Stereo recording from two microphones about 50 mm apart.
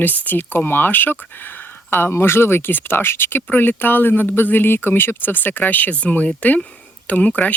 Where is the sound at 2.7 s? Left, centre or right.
Left.